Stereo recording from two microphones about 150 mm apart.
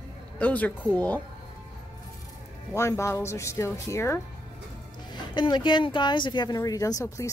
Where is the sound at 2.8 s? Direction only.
20° left (ahead or behind).